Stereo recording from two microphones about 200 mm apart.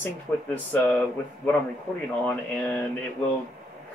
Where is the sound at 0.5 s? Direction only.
10° left (ahead or behind).